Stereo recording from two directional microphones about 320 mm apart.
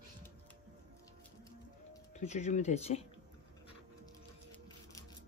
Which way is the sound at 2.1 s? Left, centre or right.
Left.